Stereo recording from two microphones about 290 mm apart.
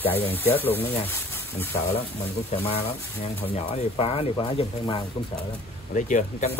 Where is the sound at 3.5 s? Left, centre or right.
Left.